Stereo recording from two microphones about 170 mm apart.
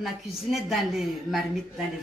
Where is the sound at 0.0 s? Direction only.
Centre (ahead or behind).